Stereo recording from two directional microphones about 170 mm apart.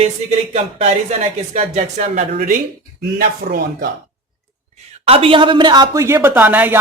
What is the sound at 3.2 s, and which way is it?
Speech, 60° right (ahead or behind).